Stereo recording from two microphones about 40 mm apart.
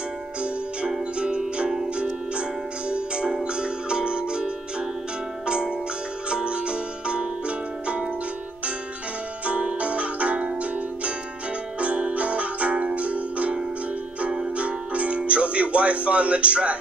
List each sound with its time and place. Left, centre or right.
1.2 s music: right
2.9 s music: right
6.3 s music: right
9.5 s music: right
14.6 s music: right